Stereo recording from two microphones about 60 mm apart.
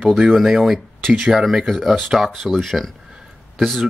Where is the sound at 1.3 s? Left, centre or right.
Centre.